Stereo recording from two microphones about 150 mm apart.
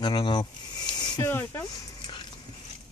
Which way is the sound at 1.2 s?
15° left (ahead or behind).